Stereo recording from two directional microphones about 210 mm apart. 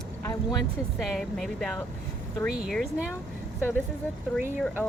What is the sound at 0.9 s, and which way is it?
Speech, centre (ahead or behind).